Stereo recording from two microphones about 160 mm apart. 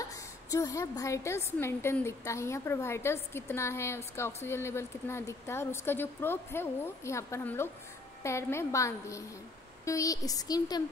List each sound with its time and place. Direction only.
0.0 s a woman's voice: 20° left (ahead or behind)